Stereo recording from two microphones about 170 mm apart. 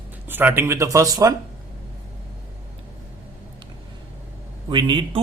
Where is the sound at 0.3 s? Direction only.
10° right (ahead or behind).